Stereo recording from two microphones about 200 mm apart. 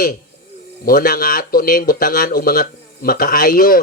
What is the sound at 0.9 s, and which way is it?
Speech, 45° left (ahead or behind).